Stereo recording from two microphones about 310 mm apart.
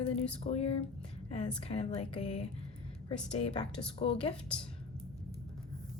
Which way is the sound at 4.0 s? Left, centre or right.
Centre.